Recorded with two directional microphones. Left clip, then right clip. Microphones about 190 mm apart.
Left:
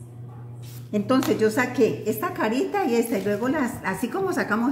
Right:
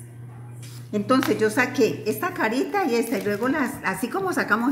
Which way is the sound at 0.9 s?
Centre (ahead or behind).